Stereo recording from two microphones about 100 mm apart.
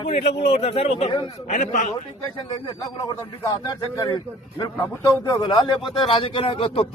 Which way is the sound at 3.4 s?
35° left (ahead or behind).